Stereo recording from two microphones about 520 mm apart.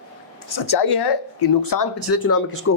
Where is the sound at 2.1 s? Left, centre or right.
Left.